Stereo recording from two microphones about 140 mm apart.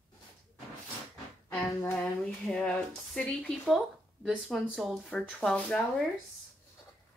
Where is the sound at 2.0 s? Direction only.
5° left (ahead or behind).